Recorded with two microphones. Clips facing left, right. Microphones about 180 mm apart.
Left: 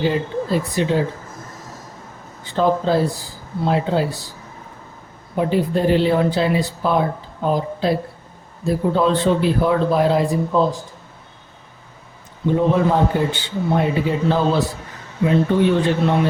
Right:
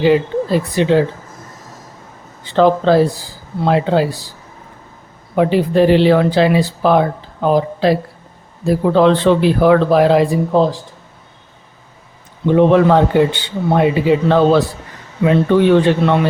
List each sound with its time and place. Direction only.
0.0 s speech: 85° right
2.6 s speech: 80° right
5.4 s speech: 80° right
12.5 s a man's voice: 75° right (ahead or behind)